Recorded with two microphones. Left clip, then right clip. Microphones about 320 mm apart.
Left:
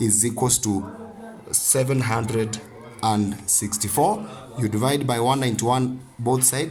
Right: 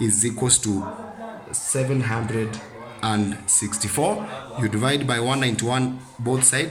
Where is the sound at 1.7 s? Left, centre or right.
Left.